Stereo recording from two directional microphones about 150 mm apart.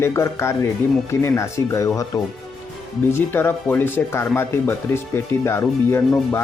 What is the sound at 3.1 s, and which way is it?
Speech, 15° left (ahead or behind).